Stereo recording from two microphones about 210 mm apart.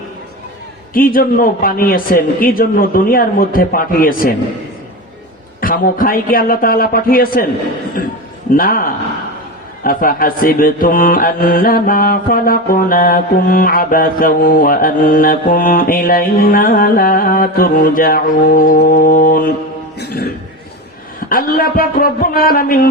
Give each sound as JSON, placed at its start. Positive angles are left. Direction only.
{"t": 0.9, "sound": "mantra", "side_deg": 45}
{"t": 5.5, "sound": "mantra", "side_deg": 40}
{"t": 8.0, "sound": "a man's voice", "side_deg": 45}
{"t": 8.5, "sound": "mantra", "side_deg": 45}
{"t": 20.0, "sound": "music", "side_deg": 50}
{"t": 21.2, "sound": "mantra", "side_deg": 45}